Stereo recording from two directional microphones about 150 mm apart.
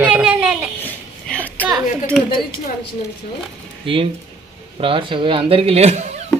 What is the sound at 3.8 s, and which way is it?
Speech, 35° right (ahead or behind).